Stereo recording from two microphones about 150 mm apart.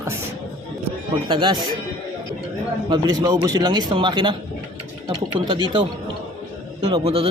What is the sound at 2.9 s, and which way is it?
A man's voice, 25° right (ahead or behind).